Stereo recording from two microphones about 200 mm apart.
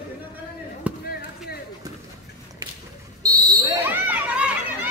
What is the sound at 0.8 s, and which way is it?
Chop, 5° right (ahead or behind).